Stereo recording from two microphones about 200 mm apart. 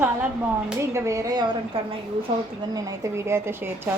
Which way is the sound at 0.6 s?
15° right (ahead or behind).